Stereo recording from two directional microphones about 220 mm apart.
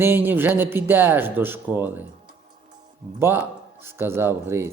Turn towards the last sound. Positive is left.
turn(degrees=-10)  # may be behind; listen again after turning